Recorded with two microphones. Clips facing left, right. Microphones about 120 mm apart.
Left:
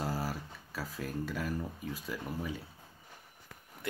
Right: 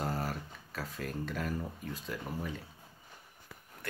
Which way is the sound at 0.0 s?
5° left (ahead or behind).